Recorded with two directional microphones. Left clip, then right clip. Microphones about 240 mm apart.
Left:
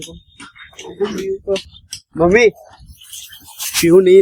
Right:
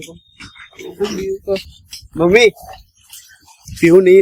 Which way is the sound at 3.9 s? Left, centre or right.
Centre.